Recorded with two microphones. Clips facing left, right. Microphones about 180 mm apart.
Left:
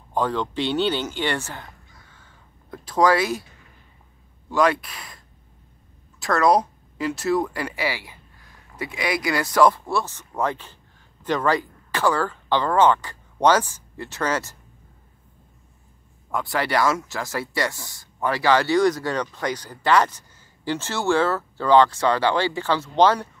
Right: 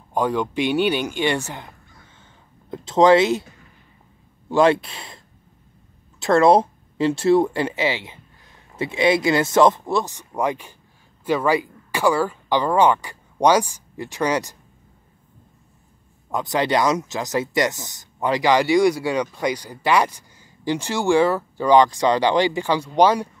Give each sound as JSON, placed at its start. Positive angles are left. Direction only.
{"t": 0.1, "sound": "speech", "side_deg": -15}
{"t": 4.5, "sound": "speech", "side_deg": -25}
{"t": 16.3, "sound": "speech", "side_deg": -20}